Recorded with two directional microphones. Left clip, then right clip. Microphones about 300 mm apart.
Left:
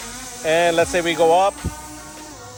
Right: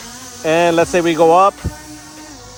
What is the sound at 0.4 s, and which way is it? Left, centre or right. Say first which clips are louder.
Speech: right 4 dB; right.